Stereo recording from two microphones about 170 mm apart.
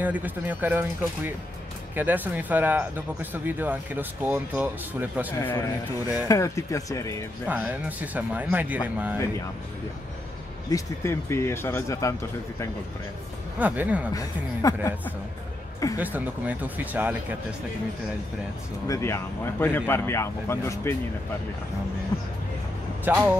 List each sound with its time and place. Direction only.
0.0 s speech: 10° right (ahead or behind)
5.4 s speech: 10° left (ahead or behind)
7.4 s speech: 10° right (ahead or behind)
10.7 s speech: 15° left (ahead or behind)
13.6 s speech: 10° right (ahead or behind)
14.1 s speech: 20° left (ahead or behind)
16.0 s speech: 10° right (ahead or behind)
18.9 s speech: 15° left (ahead or behind)
23.0 s speech: 10° right (ahead or behind)